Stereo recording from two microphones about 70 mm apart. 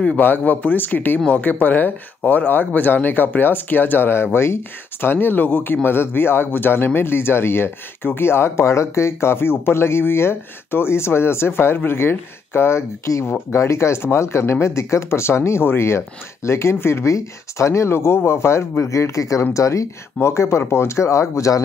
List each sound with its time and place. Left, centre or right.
0.2 s speech: left